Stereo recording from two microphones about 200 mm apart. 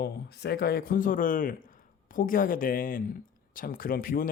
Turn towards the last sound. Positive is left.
turn(degrees=45)  # may be behind; listen again after turning